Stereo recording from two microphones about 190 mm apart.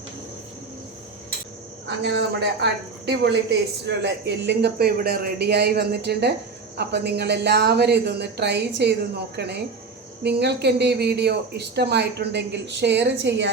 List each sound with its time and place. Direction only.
2.0 s speech: 65° right (ahead or behind)
3.8 s speech: 65° right (ahead or behind)